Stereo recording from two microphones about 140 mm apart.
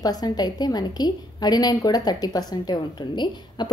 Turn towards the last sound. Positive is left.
turn(degrees=30)  # may be behind; listen again after turning